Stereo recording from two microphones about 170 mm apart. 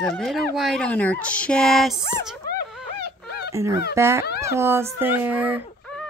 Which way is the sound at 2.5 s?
65° left (ahead or behind).